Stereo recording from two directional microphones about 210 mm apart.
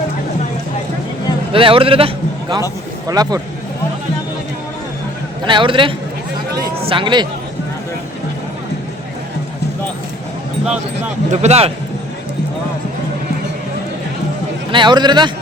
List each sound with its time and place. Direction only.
1.5 s a man's voice: 25° right (ahead or behind)
5.5 s a man's voice: 25° right (ahead or behind)
11.3 s a man's voice: 30° right (ahead or behind)
14.7 s a man's voice: 20° right (ahead or behind)